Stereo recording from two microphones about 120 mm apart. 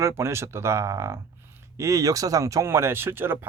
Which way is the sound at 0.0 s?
20° right (ahead or behind).